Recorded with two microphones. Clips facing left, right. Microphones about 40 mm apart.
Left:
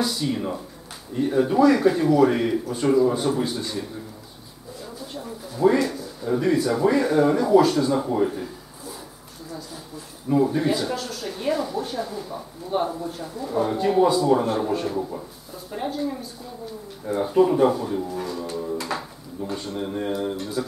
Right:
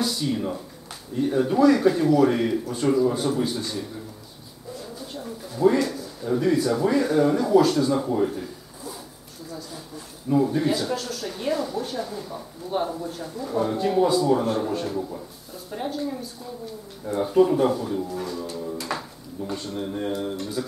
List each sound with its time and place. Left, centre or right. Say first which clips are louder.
0.0 s speech: left 1 dB; centre
5.1 s speech: even; centre
10.3 s speech: left 1 dB; centre
15.0 s speech: left 2 dB; left
15.7 s speech: left 1 dB; centre